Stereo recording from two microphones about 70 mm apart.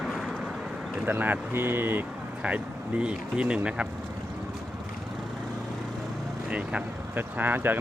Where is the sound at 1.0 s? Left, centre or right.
Right.